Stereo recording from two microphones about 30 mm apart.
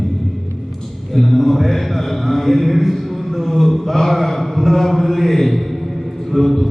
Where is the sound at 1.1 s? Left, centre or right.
Centre.